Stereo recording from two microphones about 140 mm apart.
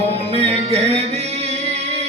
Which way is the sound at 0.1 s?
50° right (ahead or behind).